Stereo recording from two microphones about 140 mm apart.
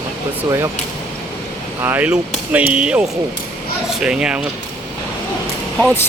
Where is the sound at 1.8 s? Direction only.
15° right (ahead or behind).